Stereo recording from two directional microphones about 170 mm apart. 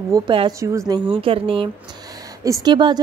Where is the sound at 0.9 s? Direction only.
30° right (ahead or behind).